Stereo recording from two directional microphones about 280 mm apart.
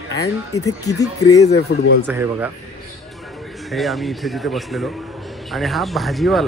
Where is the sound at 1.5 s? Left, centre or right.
Left.